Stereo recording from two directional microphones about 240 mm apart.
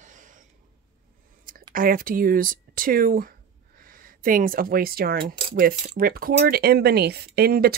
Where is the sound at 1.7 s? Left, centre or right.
Right.